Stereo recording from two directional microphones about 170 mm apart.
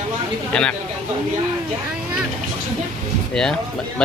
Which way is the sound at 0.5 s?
5° left (ahead or behind).